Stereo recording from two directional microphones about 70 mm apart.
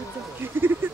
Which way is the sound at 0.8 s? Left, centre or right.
Right.